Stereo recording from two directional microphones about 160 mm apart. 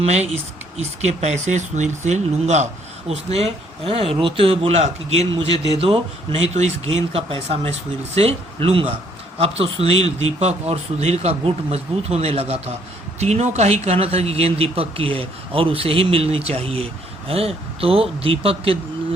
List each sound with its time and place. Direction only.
0.0 s speech: 45° right (ahead or behind)